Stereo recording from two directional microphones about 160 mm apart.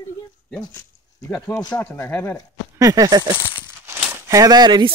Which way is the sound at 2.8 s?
20° right (ahead or behind).